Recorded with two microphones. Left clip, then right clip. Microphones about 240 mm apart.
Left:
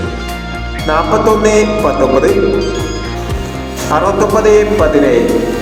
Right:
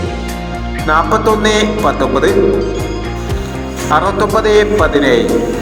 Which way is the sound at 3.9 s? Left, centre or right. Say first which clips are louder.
Left 1 dB; right.